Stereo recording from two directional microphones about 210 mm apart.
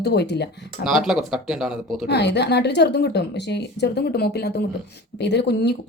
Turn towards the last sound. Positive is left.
turn(degrees=50)  # may be behind; listen again after turning